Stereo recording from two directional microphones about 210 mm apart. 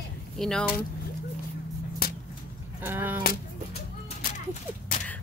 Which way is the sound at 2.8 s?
10° right (ahead or behind).